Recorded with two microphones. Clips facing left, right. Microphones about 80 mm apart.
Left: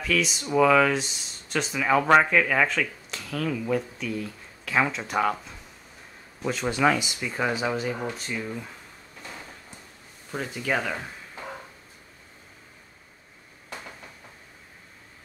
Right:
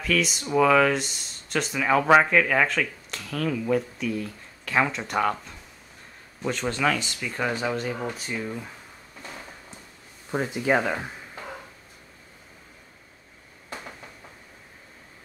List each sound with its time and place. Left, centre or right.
0.0 s speech: centre
10.3 s speech: right